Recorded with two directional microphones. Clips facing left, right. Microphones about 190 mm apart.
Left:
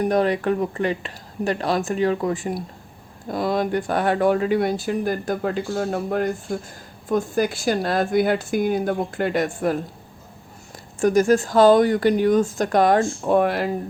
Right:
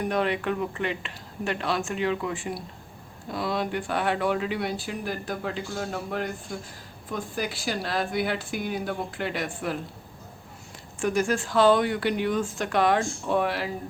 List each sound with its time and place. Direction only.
0.0 s speech: 40° left (ahead or behind)
11.0 s speech: 40° left (ahead or behind)